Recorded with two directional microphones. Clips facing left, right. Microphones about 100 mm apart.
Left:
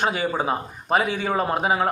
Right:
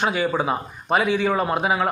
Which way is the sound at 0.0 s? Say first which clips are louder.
Right 1 dB; 40° left (ahead or behind).